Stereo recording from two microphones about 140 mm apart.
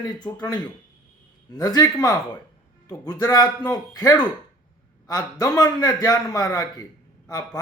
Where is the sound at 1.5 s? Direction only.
25° left (ahead or behind).